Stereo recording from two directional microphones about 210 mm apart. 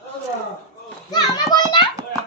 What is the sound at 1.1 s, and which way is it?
Speech, 20° left (ahead or behind).